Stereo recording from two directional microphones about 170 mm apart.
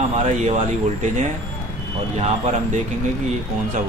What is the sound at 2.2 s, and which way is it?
Speech, 35° right (ahead or behind).